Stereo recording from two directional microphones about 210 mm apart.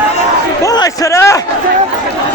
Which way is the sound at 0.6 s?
15° left (ahead or behind).